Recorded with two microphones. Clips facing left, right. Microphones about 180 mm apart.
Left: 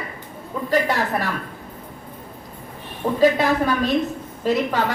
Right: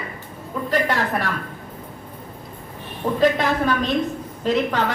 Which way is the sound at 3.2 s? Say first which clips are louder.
Left 2 dB; 10° left (ahead or behind).